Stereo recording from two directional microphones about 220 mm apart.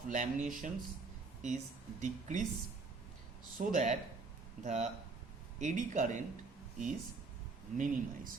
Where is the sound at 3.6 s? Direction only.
35° right (ahead or behind).